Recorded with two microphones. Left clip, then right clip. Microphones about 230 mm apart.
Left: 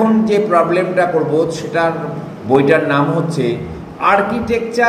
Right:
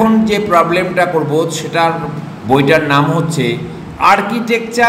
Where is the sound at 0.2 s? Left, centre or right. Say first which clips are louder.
Right 1 dB; centre.